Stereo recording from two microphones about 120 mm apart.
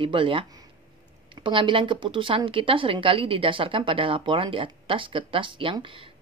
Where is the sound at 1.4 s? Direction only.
45° right (ahead or behind).